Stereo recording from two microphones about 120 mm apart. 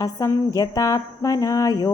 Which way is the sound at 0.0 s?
30° left (ahead or behind).